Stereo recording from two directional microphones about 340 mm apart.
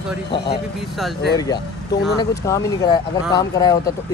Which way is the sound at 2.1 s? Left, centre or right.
Centre.